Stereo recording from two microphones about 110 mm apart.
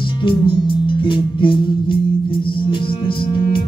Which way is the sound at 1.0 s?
50° left (ahead or behind).